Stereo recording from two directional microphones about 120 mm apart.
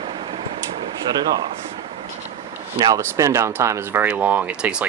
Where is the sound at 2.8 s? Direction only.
25° right (ahead or behind).